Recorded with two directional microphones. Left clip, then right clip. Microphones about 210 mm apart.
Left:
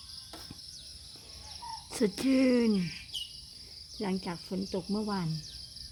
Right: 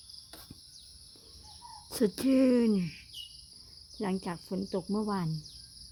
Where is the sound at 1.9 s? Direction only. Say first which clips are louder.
Right 1 dB; 15° right (ahead or behind).